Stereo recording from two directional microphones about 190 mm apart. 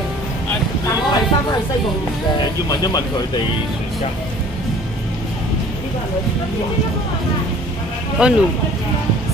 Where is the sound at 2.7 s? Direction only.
20° left (ahead or behind).